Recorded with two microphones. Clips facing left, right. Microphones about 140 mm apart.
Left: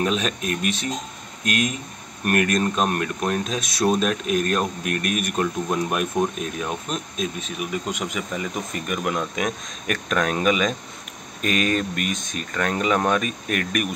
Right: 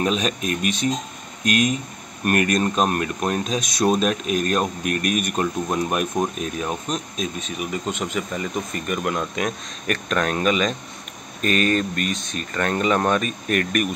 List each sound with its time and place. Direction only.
0.0 s speech: centre (ahead or behind)
12.1 s speech: 50° left (ahead or behind)
12.4 s speech: centre (ahead or behind)